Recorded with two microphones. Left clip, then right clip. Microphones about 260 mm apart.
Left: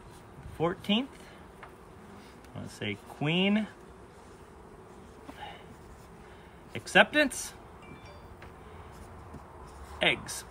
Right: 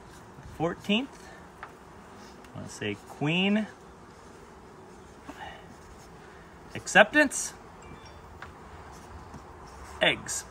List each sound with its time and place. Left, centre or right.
0.6 s speech: centre
2.8 s speech: centre
6.7 s speech: centre
9.9 s speech: centre